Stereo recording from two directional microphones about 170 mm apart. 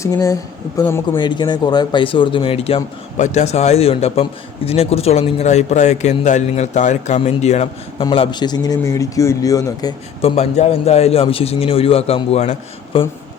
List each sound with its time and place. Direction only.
0.0 s speech: 20° left (ahead or behind); by 8.0 s 40° left (ahead or behind)
8.0 s speech: 30° left (ahead or behind)
10.2 s speech: 35° left (ahead or behind)